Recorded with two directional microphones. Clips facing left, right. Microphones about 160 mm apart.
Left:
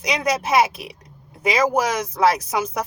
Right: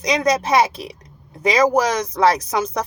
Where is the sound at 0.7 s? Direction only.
35° right (ahead or behind).